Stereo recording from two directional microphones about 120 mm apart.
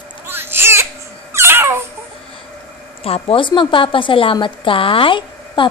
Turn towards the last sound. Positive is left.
turn(degrees=45)  # may be behind; listen again after turning